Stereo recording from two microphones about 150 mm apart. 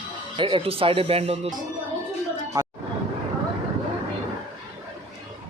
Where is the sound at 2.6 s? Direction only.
25° right (ahead or behind).